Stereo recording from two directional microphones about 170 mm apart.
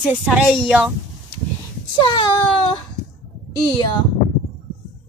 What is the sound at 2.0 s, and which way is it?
Speech, 30° left (ahead or behind).